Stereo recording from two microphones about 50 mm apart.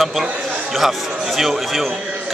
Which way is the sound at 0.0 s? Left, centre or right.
Centre.